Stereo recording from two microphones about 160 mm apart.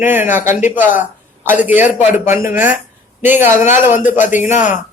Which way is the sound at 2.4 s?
60° left (ahead or behind).